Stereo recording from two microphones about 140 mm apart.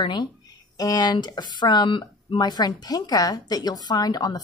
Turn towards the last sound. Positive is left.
turn(degrees=30)  # may be behind; listen again after turning